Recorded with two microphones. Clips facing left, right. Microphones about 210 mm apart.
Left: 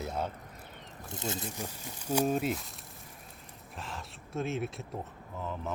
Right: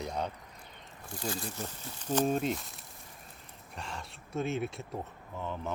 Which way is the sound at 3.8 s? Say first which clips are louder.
Even; centre (ahead or behind).